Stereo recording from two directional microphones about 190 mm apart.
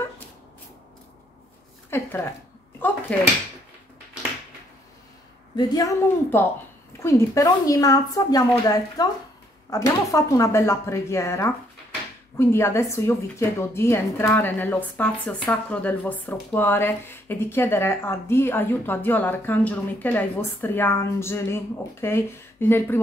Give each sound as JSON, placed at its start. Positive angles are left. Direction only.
{"t": 1.9, "sound": "speech", "side_deg": 15}
{"t": 3.1, "sound": "a woman's voice", "side_deg": 5}
{"t": 5.6, "sound": "a woman's voice", "side_deg": 20}